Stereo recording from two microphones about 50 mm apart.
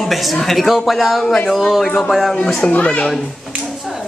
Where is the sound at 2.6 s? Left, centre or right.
Left.